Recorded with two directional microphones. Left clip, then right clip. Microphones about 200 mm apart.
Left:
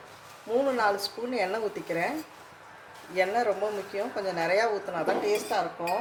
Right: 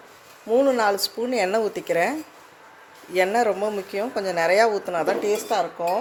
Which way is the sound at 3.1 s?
50° right (ahead or behind).